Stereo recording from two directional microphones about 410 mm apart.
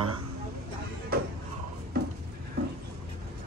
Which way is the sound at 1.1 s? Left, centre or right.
Right.